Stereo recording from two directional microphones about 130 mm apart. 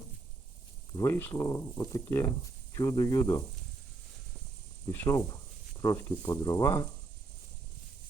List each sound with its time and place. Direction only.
0.9 s speech: 20° left (ahead or behind)
4.9 s speech: 25° left (ahead or behind)